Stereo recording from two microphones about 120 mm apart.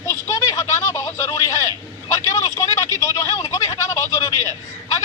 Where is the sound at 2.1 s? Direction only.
25° left (ahead or behind).